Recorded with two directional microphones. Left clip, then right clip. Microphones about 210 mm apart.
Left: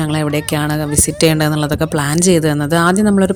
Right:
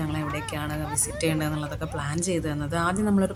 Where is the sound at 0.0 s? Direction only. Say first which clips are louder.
Left 12 dB; 40° left (ahead or behind).